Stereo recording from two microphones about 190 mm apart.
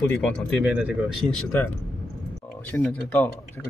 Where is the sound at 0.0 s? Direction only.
10° left (ahead or behind).